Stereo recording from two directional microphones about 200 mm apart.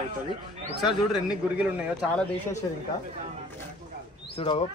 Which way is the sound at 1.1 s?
5° right (ahead or behind).